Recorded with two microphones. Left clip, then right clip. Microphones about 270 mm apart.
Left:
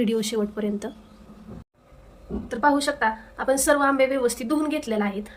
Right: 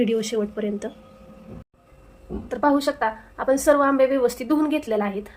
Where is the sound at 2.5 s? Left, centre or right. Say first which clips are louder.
Right 1 dB; right.